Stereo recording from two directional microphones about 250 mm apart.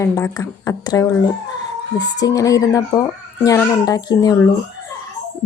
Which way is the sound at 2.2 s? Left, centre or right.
Centre.